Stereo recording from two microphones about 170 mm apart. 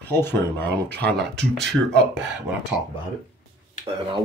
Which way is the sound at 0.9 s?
80° right.